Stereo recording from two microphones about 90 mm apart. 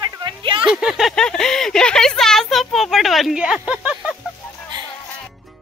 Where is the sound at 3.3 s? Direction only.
10° right (ahead or behind).